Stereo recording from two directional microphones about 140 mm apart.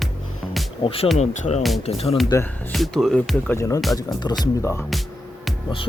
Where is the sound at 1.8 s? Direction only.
45° left (ahead or behind).